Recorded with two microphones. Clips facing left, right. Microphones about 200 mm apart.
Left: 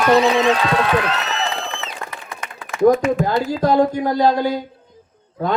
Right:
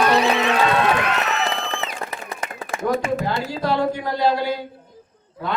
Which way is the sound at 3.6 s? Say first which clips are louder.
Left 6 dB; 40° left (ahead or behind).